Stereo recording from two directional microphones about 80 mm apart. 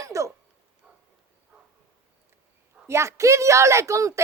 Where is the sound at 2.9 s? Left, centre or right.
Right.